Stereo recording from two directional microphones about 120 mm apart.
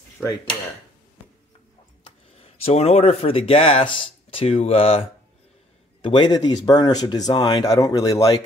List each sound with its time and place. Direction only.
2.3 s speech: 55° left (ahead or behind)
6.0 s speech: 40° left (ahead or behind)